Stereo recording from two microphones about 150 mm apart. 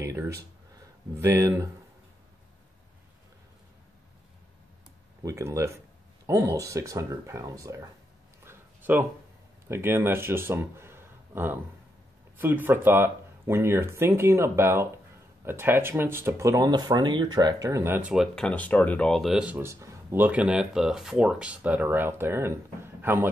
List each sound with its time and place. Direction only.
0.0 s speech: 20° right (ahead or behind)
5.2 s speech: 20° right (ahead or behind)
8.5 s a sound: 15° right (ahead or behind)
9.7 s speech: 15° right (ahead or behind)